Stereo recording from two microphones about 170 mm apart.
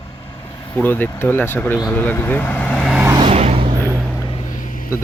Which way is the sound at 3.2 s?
35° right (ahead or behind).